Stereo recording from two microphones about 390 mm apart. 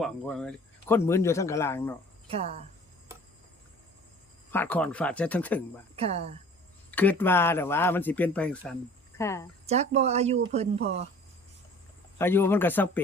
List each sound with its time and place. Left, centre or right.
0.0 s speech: centre
2.2 s speech: centre
4.5 s speech: centre
6.0 s speech: centre
6.9 s speech: centre
9.6 s speech: centre
12.1 s speech: centre